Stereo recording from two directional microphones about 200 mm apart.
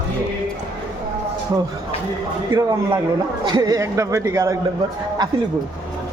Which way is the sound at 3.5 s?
20° right (ahead or behind).